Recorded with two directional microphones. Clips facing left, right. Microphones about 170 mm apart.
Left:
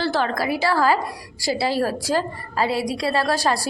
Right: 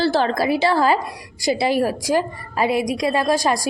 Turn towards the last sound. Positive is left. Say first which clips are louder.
# right 2 dB
turn(degrees=-15)  # may be behind; listen again after turning